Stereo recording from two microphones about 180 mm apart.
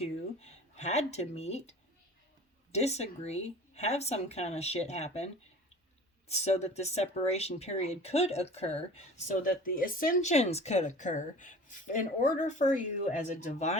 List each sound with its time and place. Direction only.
0.0 s speech: 35° left (ahead or behind)
2.7 s speech: 35° left (ahead or behind)